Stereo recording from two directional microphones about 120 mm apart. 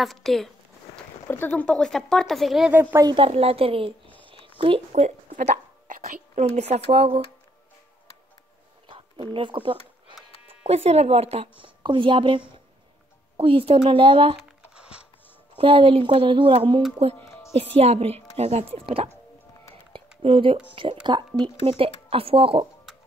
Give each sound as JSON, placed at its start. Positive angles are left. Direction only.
{"t": 0.0, "sound": "speech", "side_deg": 0}
{"t": 1.2, "sound": "speech", "side_deg": 15}
{"t": 2.7, "sound": "a woman's voice", "side_deg": -20}
{"t": 3.2, "sound": "a woman's voice", "side_deg": -55}
{"t": 8.8, "sound": "a sound", "side_deg": -45}
{"t": 10.7, "sound": "a woman's voice", "side_deg": -60}
{"t": 14.7, "sound": "a sound", "side_deg": -10}
{"t": 15.5, "sound": "a woman's voice", "side_deg": -45}
{"t": 17.7, "sound": "a woman's voice", "side_deg": -60}
{"t": 20.2, "sound": "a woman's voice", "side_deg": -50}